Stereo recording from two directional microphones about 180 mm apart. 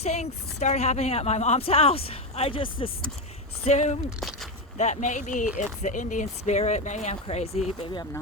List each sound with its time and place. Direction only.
0.0 s a woman's voice: 35° left (ahead or behind)
3.7 s a woman's voice: 40° left (ahead or behind)
4.2 s a sound: centre (ahead or behind)
4.8 s a woman's voice: 40° left (ahead or behind)